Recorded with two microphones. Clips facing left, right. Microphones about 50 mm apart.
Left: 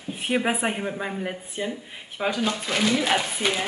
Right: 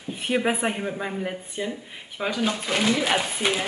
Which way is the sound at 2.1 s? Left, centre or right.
Centre.